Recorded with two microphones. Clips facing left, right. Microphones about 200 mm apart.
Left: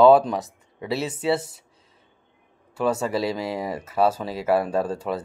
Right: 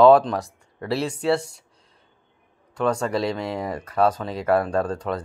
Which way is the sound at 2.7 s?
5° left (ahead or behind).